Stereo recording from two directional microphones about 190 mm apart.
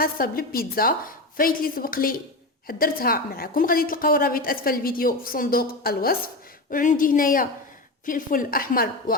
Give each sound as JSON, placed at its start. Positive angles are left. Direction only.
{"t": 0.0, "sound": "a woman's voice", "side_deg": 50}